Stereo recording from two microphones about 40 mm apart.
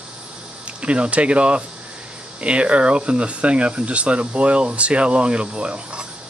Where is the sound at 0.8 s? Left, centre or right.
Right.